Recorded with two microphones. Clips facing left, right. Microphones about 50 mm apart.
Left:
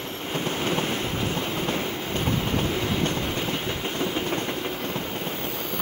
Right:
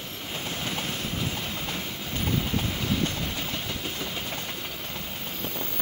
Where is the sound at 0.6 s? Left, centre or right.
Left.